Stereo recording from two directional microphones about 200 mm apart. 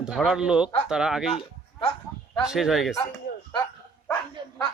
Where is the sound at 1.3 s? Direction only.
30° left (ahead or behind).